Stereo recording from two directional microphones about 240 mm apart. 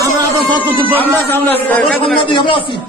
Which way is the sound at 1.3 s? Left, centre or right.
Centre.